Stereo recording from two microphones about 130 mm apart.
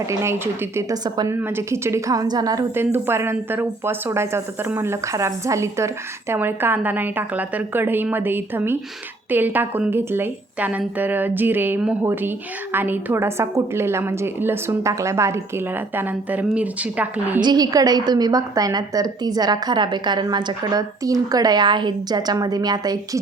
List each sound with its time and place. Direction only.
0.1 s a woman's voice: 20° right (ahead or behind)
1.3 s a woman's voice: 15° right (ahead or behind)
2.7 s a woman's voice: 20° right (ahead or behind)
17.4 s a woman's voice: 30° right (ahead or behind)